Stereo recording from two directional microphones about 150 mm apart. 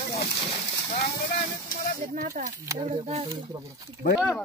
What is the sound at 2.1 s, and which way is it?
Speech, 70° right (ahead or behind).